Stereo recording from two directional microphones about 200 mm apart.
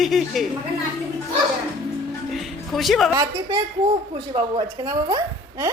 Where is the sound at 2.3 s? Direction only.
Centre (ahead or behind).